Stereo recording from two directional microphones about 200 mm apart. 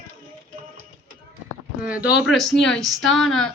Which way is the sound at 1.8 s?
5° right (ahead or behind).